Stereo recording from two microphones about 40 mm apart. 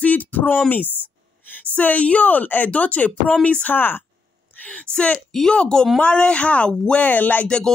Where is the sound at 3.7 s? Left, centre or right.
Left.